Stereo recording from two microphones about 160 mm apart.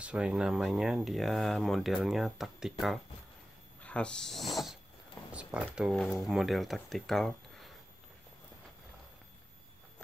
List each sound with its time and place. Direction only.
0.0 s speech: 5° right (ahead or behind)
3.8 s speech: 5° left (ahead or behind)
5.3 s a sound: 5° right (ahead or behind)
5.8 s speech: centre (ahead or behind)